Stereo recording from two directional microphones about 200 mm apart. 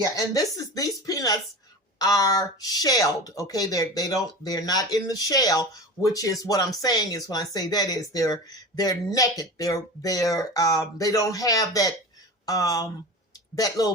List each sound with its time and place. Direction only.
0.0 s speech: 15° left (ahead or behind)